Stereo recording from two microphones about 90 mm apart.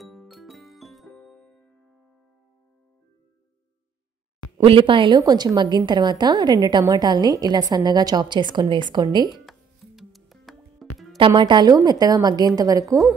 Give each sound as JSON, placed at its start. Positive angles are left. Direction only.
{"t": 0.0, "sound": "music", "side_deg": 0}
{"t": 4.6, "sound": "a woman's voice", "side_deg": -75}
{"t": 9.5, "sound": "music", "side_deg": 0}
{"t": 11.1, "sound": "a woman's voice", "side_deg": -65}